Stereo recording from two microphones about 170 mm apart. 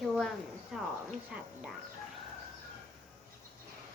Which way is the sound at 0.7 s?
Centre (ahead or behind).